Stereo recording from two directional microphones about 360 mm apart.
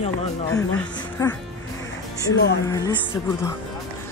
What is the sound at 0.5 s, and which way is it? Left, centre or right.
Speech, centre.